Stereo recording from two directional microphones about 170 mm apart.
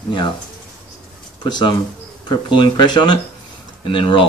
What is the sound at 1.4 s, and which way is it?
Speech, 25° left (ahead or behind).